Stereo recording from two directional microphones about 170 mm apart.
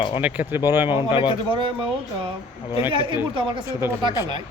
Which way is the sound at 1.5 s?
30° right (ahead or behind).